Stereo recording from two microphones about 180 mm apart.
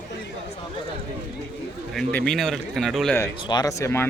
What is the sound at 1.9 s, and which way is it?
A man's voice, 5° left (ahead or behind).